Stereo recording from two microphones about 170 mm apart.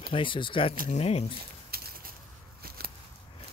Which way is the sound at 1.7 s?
65° right (ahead or behind).